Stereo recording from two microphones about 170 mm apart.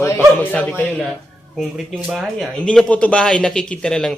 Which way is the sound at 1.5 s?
Centre (ahead or behind).